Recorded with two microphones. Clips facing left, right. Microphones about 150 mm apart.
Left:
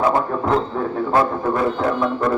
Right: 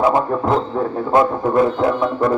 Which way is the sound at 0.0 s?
15° right (ahead or behind).